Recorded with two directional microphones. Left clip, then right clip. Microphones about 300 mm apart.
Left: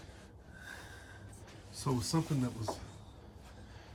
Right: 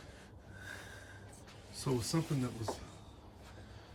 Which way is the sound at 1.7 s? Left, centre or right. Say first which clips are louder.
Left 1 dB; centre.